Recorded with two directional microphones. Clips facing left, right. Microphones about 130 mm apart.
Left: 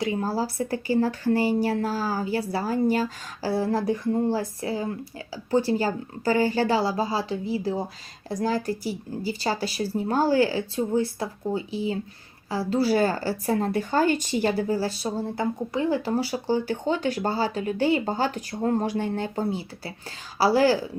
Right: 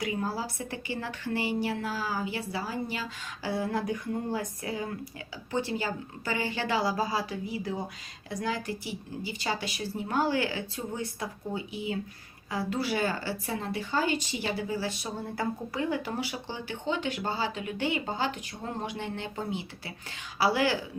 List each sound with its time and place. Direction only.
0.0 s speech: 30° left (ahead or behind)